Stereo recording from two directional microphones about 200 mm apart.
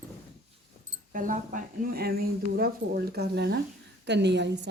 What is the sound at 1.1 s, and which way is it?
Speech, 40° right (ahead or behind).